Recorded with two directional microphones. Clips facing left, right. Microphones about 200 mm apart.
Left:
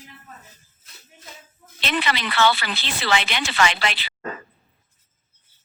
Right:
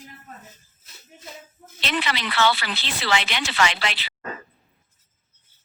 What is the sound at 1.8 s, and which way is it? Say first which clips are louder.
Speech: left 2 dB; 50° left (ahead or behind).